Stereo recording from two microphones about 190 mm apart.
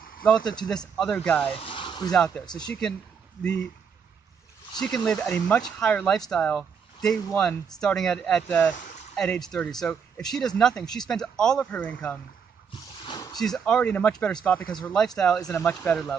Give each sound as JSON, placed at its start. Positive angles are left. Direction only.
{"t": 0.2, "sound": "speech", "side_deg": 5}
{"t": 1.5, "sound": "a sound", "side_deg": 25}
{"t": 2.6, "sound": "speech", "side_deg": 5}
{"t": 4.7, "sound": "speech", "side_deg": 0}
{"t": 13.0, "sound": "a sound", "side_deg": 20}
{"t": 13.4, "sound": "speech", "side_deg": 5}